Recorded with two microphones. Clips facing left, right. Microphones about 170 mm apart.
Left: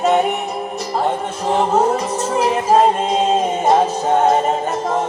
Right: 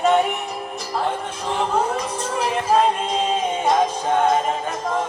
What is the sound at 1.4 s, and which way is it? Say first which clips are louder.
Music: left 6 dB; 45° left (ahead or behind).